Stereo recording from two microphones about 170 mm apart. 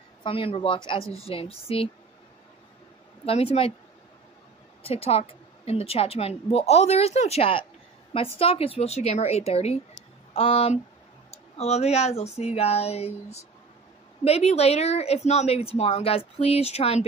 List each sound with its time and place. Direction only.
0.2 s a woman's voice: 35° left (ahead or behind)
3.3 s a woman's voice: 35° left (ahead or behind)
4.8 s a woman's voice: 35° left (ahead or behind)